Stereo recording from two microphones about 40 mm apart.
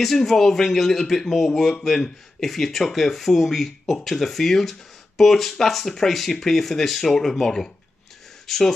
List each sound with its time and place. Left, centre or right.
0.0 s speech: centre